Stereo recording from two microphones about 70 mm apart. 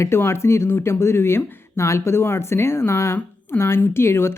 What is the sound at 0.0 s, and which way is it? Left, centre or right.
Speech, left.